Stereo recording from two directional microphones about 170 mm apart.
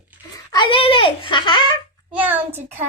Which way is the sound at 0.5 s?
30° left (ahead or behind).